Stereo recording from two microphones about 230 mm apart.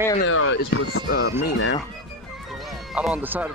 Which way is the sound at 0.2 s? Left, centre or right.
Left.